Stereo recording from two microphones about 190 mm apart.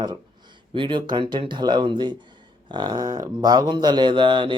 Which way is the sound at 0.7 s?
25° right (ahead or behind).